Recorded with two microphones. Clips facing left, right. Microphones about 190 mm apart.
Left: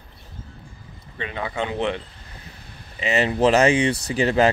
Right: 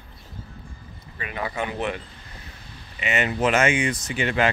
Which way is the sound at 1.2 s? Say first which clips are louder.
Left 2 dB; 25° left (ahead or behind).